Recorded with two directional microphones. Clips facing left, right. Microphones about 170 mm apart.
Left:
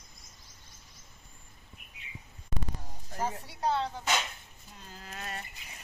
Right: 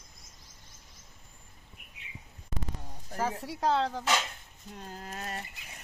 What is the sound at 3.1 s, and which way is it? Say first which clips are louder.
Speech: right 2 dB; 90° right.